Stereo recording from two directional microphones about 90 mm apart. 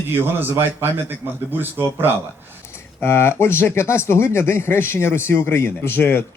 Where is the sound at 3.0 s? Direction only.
25° left (ahead or behind).